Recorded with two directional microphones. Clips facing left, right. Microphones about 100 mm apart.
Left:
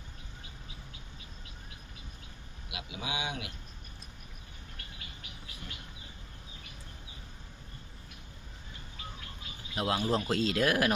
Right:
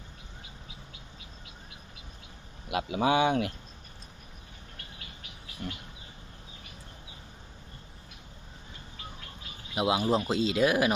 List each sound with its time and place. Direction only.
2.6 s speech: 50° right (ahead or behind)
9.7 s speech: 10° right (ahead or behind)